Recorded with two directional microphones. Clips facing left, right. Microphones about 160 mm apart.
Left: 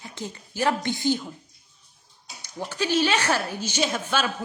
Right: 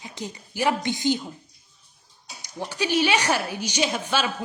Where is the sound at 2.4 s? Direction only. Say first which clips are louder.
Even; 15° right (ahead or behind).